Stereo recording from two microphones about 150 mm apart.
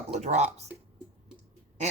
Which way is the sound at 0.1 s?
50° right (ahead or behind).